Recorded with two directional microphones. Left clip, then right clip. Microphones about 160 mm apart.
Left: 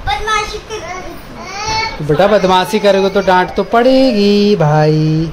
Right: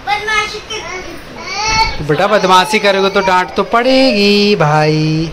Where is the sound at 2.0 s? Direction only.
20° left (ahead or behind).